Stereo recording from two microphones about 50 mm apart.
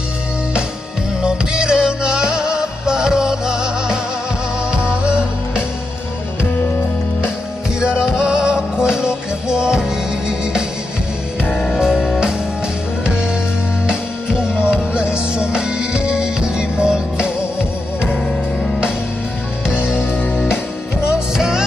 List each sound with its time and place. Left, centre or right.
1.2 s music: centre
7.8 s music: centre
11.7 s music: centre
13.8 s music: centre
19.8 s music: centre
20.1 s music: left
21.1 s music: centre